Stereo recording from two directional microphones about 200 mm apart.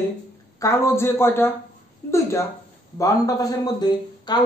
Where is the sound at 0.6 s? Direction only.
15° left (ahead or behind).